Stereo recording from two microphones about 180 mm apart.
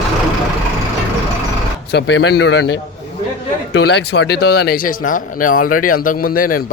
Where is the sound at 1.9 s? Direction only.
75° left (ahead or behind).